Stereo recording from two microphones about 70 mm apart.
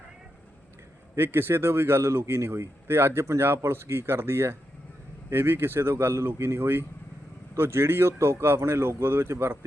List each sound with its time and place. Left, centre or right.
1.1 s speech: right